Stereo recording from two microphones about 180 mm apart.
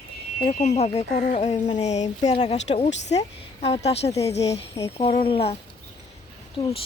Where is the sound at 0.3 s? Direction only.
40° left (ahead or behind).